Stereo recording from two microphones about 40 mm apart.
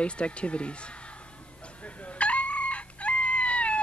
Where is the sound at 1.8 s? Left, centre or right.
Left.